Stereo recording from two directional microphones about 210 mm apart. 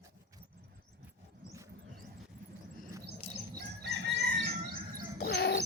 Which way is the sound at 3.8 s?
55° right (ahead or behind).